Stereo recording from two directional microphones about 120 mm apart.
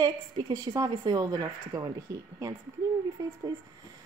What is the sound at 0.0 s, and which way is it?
A woman's voice, 35° right (ahead or behind).